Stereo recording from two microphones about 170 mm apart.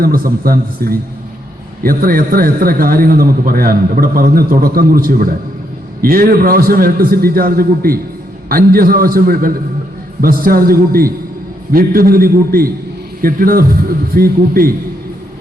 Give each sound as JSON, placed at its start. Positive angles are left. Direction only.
{"t": 0.0, "sound": "a man's voice", "side_deg": -60}